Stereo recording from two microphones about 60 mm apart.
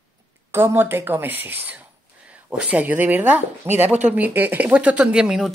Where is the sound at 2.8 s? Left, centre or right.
Right.